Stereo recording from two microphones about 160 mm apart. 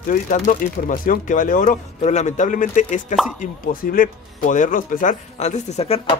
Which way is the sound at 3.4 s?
60° left (ahead or behind).